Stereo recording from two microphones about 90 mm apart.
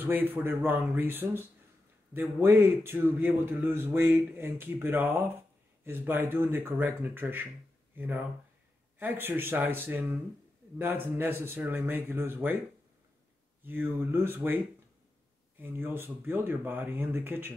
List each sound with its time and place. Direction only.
0.0 s a man's voice: 20° right (ahead or behind)
13.7 s a man's voice: 25° right (ahead or behind)
15.6 s a man's voice: 20° right (ahead or behind)